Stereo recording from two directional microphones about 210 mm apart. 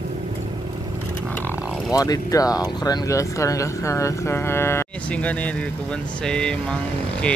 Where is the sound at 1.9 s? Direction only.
15° left (ahead or behind).